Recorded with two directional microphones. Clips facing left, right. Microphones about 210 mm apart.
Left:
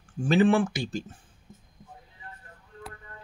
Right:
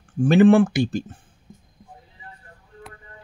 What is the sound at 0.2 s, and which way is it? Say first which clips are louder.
Speech: right 7 dB; 55° right (ahead or behind).